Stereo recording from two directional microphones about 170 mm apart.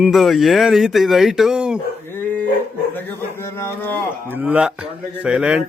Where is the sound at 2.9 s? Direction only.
15° left (ahead or behind).